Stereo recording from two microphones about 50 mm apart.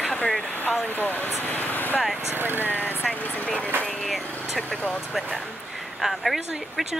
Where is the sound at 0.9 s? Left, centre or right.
Left.